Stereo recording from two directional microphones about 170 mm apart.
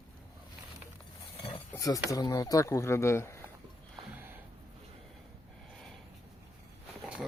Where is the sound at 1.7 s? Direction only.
20° left (ahead or behind).